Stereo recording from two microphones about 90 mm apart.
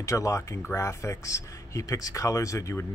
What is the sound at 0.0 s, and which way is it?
Speech, 35° left (ahead or behind).